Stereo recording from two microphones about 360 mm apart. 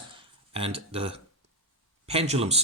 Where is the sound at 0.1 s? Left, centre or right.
Centre.